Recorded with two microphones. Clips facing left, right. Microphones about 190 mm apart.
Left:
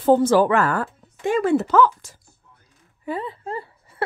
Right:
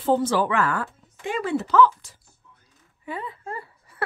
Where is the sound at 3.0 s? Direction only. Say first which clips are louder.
Left 5 dB; 30° left (ahead or behind).